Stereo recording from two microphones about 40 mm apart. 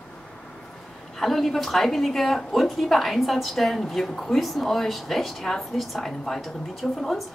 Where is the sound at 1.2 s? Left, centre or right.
Centre.